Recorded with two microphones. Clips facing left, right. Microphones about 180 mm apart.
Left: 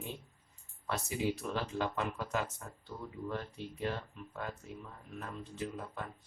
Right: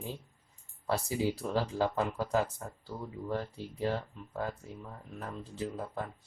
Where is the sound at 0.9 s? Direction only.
30° right (ahead or behind).